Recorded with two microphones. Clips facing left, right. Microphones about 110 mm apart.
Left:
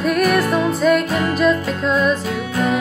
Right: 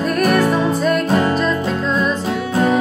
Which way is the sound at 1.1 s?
35° right (ahead or behind).